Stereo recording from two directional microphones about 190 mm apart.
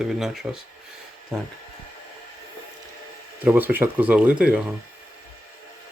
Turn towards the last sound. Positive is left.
turn(degrees=-5)  # may be behind; listen again after turning